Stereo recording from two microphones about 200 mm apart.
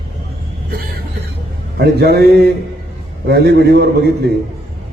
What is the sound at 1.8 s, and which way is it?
A man's voice, 55° right (ahead or behind).